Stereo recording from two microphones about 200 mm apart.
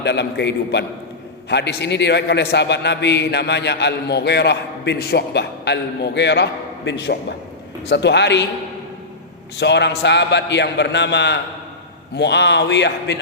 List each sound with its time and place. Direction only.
0.0 s a man's voice: 60° left (ahead or behind)
9.6 s a man's voice: 60° left (ahead or behind)